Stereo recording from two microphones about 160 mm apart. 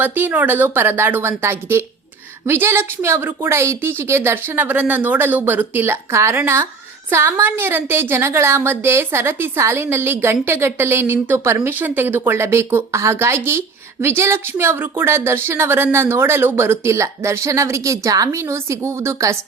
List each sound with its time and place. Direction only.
0.0 s speech: 10° right (ahead or behind)